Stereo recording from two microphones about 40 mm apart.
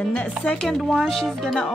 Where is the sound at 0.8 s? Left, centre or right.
Centre.